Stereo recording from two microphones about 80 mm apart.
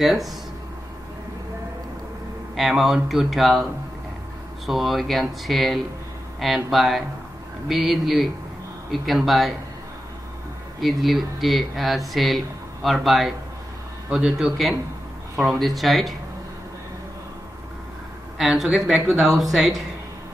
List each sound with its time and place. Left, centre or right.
0.0 s speech: centre
2.5 s speech: centre
4.6 s speech: centre
10.8 s speech: centre
18.4 s speech: centre